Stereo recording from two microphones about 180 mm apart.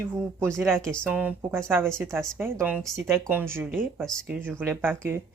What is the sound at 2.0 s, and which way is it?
Speech, 5° left (ahead or behind).